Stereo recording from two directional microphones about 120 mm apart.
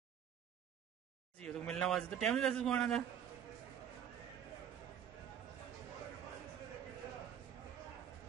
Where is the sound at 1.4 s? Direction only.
5° left (ahead or behind).